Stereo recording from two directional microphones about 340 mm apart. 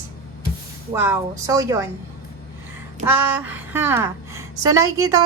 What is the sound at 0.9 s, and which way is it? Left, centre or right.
Speech, centre.